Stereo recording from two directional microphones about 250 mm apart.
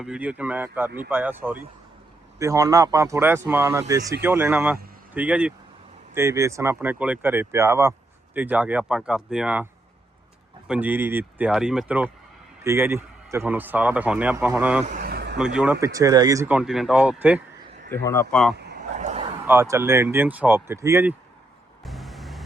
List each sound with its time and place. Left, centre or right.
0.0 s speech: centre
10.7 s speech: centre
14.8 s vehicle: right
15.4 s speech: centre
17.9 s a man's voice: centre
18.5 s a sound: right
18.9 s a sound: right
19.5 s speech: centre
21.8 s vehicle: centre